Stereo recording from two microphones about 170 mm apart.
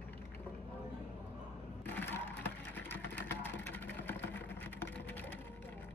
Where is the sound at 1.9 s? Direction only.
10° left (ahead or behind).